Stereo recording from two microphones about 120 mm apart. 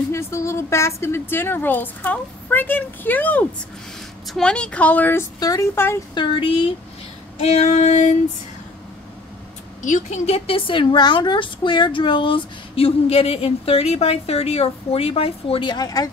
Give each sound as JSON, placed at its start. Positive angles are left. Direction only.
{"t": 0.1, "sound": "a woman's voice", "side_deg": 25}
{"t": 5.4, "sound": "speech", "side_deg": 30}
{"t": 6.1, "sound": "a woman's voice", "side_deg": 45}
{"t": 7.4, "sound": "female singing", "side_deg": 65}
{"t": 9.8, "sound": "a woman's voice", "side_deg": 90}